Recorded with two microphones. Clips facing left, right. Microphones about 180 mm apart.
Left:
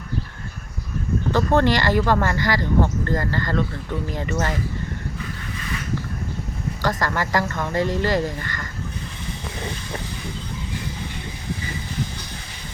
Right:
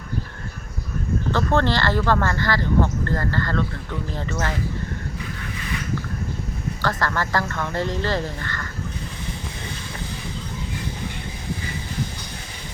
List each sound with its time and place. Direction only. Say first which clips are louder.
1.3 s speech: left 3 dB; 15° left (ahead or behind)
6.8 s speech: left 1 dB; 15° left (ahead or behind)